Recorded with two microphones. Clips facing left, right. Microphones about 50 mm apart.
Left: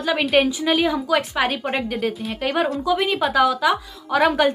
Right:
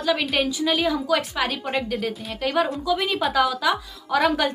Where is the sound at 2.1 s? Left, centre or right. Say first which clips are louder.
Left 4 dB; centre.